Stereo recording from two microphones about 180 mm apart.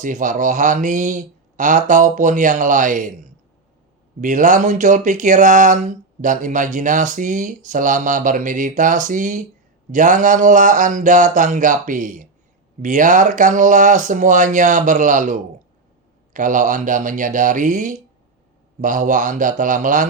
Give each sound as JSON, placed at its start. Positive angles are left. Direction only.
{"t": 0.0, "sound": "speech", "side_deg": -45}
{"t": 4.2, "sound": "speech", "side_deg": -45}